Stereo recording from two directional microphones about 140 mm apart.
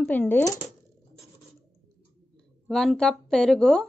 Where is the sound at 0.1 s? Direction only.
15° left (ahead or behind).